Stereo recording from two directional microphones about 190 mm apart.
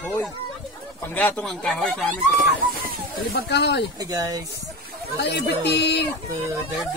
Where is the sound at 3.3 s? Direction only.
60° left (ahead or behind).